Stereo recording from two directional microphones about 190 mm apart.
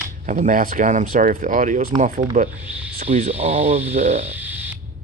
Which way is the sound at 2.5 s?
10° right (ahead or behind).